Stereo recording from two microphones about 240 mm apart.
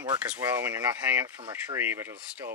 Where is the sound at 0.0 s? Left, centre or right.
Centre.